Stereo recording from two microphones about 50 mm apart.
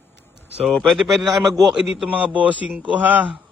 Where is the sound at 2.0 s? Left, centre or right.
Right.